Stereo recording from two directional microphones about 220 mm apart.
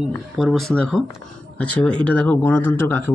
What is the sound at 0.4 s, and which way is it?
Speech, centre (ahead or behind).